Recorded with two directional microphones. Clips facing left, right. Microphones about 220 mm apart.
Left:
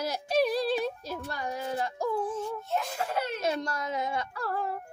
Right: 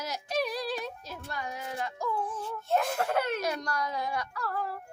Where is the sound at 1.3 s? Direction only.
35° left (ahead or behind).